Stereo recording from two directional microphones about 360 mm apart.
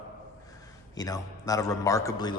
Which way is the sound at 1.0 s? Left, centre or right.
Centre.